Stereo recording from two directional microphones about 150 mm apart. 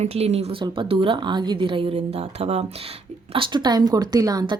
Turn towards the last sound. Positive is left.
turn(degrees=-25)  # may be behind; listen again after turning